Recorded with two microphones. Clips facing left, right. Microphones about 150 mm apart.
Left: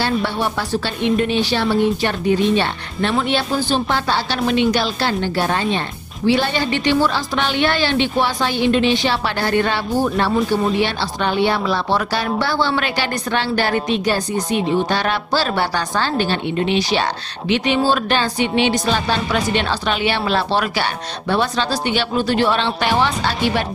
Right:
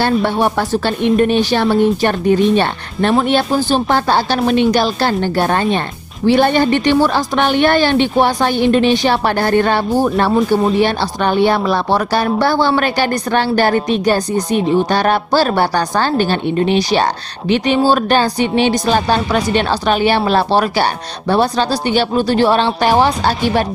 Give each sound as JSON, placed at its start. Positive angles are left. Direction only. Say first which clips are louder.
{"t": 0.0, "sound": "a woman's voice", "louder": "right 5 dB", "side_deg": -50}